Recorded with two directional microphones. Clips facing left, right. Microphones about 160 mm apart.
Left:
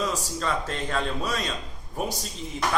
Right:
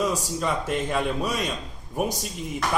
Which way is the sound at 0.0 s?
15° right (ahead or behind).